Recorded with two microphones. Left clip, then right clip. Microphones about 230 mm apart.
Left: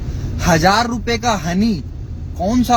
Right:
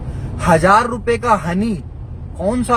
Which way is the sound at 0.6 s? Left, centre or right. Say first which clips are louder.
Right 2 dB; right.